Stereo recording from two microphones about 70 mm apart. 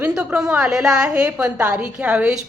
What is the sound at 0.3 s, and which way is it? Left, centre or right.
A woman's voice, centre.